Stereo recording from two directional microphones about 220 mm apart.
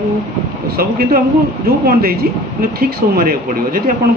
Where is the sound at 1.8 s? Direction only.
45° right (ahead or behind).